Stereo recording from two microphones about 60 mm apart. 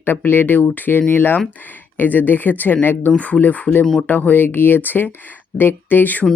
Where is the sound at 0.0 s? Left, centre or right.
Left.